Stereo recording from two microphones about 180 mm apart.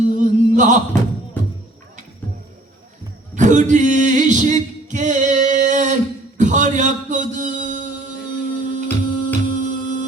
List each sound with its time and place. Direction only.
0.0 s chant: 45° right (ahead or behind)
3.3 s music: 45° right (ahead or behind)